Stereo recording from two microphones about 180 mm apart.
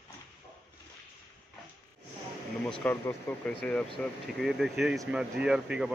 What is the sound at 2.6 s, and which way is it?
Speech, 5° left (ahead or behind).